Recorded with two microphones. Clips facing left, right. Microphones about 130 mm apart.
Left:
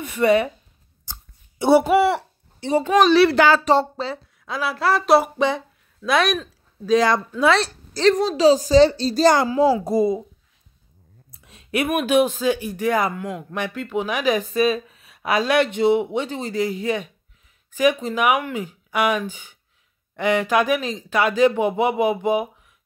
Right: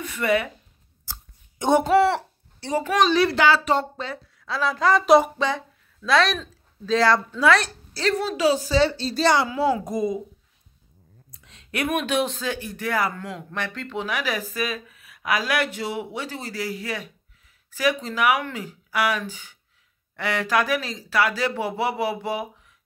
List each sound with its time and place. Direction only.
0.0 s speech: 20° left (ahead or behind)
1.6 s speech: 10° left (ahead or behind)
2.7 s speech: 20° left (ahead or behind)
3.0 s speech: 75° left (ahead or behind)
3.3 s speech: 45° left (ahead or behind)
3.7 s a woman's voice: 30° left (ahead or behind)
4.5 s speech: 10° left (ahead or behind)
6.0 s speech: 15° left (ahead or behind)
7.9 s a woman's voice: 40° left (ahead or behind)
11.3 s a sound: 20° left (ahead or behind)
11.9 s speech: 10° left (ahead or behind)